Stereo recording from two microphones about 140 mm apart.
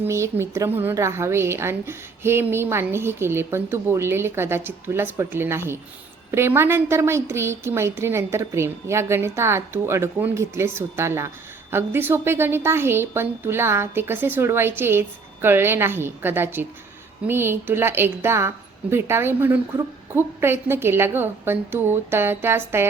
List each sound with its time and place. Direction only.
0.0 s a woman's voice: 20° right (ahead or behind)